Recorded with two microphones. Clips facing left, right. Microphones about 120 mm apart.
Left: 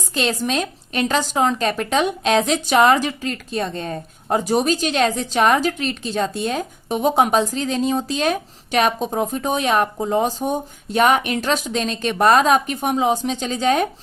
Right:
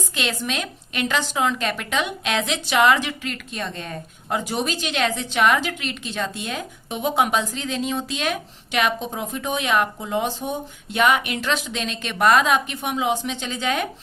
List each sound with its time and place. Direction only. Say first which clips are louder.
0.1 s a woman's voice: left 7 dB; 35° left (ahead or behind)